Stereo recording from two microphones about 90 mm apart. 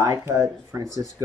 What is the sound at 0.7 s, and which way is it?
Speech, 25° right (ahead or behind).